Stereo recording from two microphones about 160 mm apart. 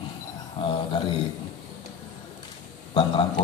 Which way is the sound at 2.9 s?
30° left (ahead or behind).